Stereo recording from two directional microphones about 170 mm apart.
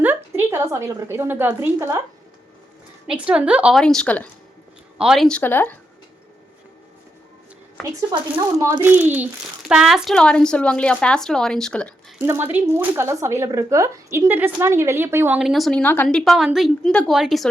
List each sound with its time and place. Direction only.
0.0 s a woman's voice: 10° right (ahead or behind)
3.1 s a child's voice: 5° right (ahead or behind)
4.9 s speech: centre (ahead or behind)
8.1 s speech: 25° right (ahead or behind)
8.8 s a child's voice: 10° right (ahead or behind); by 11.9 s 5° left (ahead or behind)
12.2 s speech: 15° right (ahead or behind)
15.4 s a child's voice: centre (ahead or behind)